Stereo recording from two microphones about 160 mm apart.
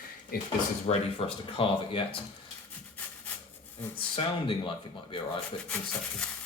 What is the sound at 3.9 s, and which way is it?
Speech, 35° left (ahead or behind).